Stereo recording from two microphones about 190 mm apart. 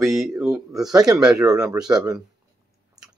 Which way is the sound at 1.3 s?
15° right (ahead or behind).